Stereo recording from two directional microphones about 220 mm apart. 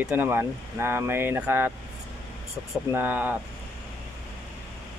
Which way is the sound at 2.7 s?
10° right (ahead or behind).